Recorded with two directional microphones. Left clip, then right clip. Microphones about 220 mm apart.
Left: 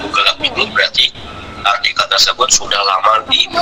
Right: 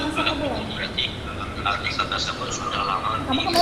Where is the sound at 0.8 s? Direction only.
50° left (ahead or behind).